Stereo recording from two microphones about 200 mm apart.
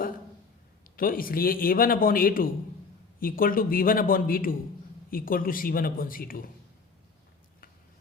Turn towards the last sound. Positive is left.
turn(degrees=45)  # may be behind; listen again after turning